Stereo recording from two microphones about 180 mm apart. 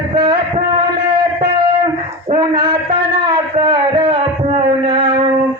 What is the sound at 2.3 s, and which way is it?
Mantra, 30° right (ahead or behind).